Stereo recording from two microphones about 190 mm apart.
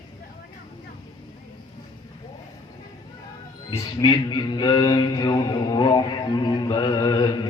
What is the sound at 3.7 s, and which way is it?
Speech, 20° left (ahead or behind).